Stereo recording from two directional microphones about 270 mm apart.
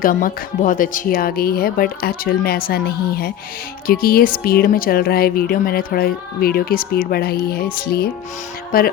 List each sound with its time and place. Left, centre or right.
0.0 s speech: left